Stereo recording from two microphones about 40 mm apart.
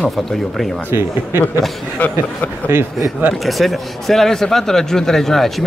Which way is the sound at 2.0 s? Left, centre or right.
Left.